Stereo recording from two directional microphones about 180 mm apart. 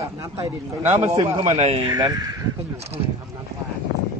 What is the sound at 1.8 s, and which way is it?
Speech, 20° right (ahead or behind).